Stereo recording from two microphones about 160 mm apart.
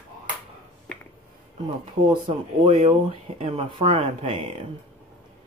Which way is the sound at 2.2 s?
35° right (ahead or behind).